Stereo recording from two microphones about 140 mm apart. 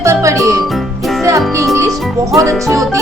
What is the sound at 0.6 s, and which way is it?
Music, centre (ahead or behind).